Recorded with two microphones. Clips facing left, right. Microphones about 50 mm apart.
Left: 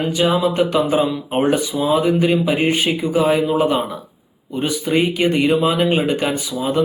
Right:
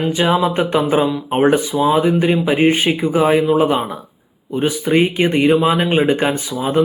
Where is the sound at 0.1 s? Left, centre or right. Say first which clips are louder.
Right 1 dB; right.